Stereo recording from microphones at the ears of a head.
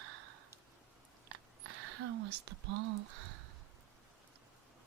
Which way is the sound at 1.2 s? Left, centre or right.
Right.